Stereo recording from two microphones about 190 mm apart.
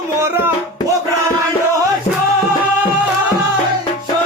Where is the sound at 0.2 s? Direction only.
15° right (ahead or behind).